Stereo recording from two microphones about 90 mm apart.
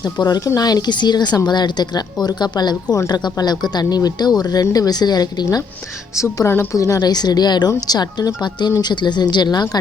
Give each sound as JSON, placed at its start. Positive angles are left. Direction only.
{"t": 0.2, "sound": "speech", "side_deg": 45}
{"t": 6.1, "sound": "speech", "side_deg": 30}
{"t": 6.7, "sound": "speech", "side_deg": 40}